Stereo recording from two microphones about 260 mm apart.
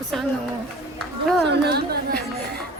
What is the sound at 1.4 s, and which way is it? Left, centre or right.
Speech, right.